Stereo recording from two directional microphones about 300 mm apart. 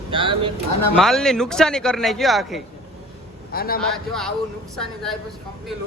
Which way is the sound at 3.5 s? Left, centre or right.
Left.